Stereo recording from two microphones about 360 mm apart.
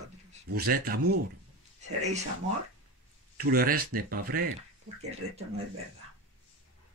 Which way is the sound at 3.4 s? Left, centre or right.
Right.